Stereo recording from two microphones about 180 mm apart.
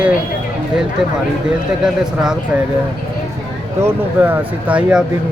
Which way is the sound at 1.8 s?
5° right (ahead or behind).